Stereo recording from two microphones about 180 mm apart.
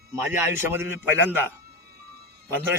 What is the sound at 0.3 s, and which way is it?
A man's voice, 15° right (ahead or behind).